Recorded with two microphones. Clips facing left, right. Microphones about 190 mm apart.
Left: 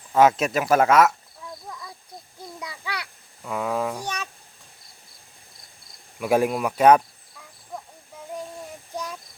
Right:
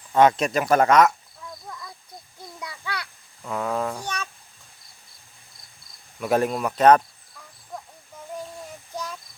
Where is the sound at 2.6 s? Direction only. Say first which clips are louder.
Right 1 dB; 10° left (ahead or behind).